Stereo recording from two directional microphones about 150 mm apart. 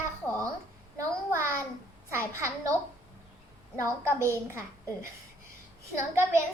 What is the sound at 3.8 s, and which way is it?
Speech, 20° right (ahead or behind).